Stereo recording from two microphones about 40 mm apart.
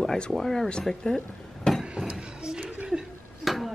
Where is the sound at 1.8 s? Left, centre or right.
Centre.